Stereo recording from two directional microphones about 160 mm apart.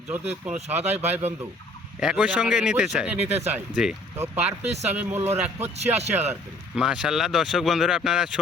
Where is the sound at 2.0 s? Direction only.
5° right (ahead or behind).